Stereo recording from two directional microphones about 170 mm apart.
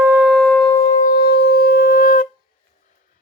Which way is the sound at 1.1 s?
70° left (ahead or behind).